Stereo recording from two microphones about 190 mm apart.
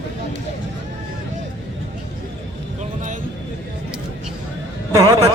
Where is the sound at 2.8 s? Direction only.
40° right (ahead or behind).